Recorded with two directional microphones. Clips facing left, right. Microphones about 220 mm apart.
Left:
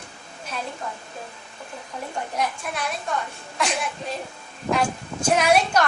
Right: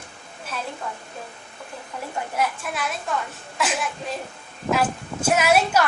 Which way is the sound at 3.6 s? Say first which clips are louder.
Even; 5° right (ahead or behind).